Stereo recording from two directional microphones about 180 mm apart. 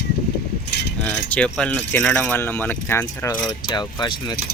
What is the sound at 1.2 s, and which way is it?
Speech, 10° left (ahead or behind).